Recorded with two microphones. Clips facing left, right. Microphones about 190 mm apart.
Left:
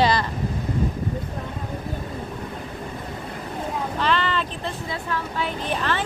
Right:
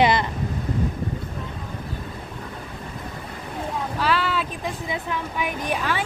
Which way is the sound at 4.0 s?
5° right (ahead or behind).